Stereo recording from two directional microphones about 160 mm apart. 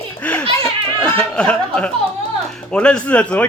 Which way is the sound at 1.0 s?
5° left (ahead or behind).